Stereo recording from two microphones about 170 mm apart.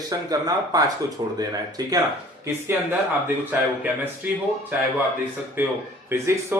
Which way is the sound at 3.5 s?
10° right (ahead or behind).